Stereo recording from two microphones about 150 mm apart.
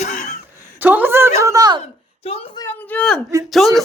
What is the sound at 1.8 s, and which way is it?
Speech, 40° left (ahead or behind).